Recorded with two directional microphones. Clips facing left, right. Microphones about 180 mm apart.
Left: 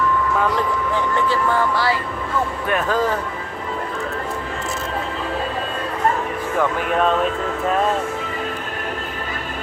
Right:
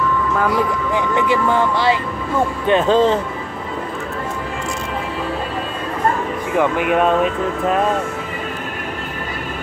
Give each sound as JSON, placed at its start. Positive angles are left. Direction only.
{"t": 0.4, "sound": "speech", "side_deg": -10}
{"t": 6.9, "sound": "speech", "side_deg": -10}